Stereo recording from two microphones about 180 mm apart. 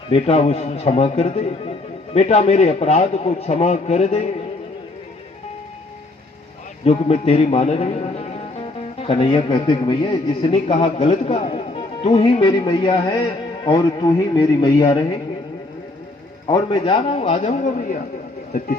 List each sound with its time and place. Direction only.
0.1 s a man's voice: 35° left (ahead or behind)
6.8 s a man's voice: 35° left (ahead or behind)
16.5 s a man's voice: 30° left (ahead or behind); by 18.0 s 50° left (ahead or behind)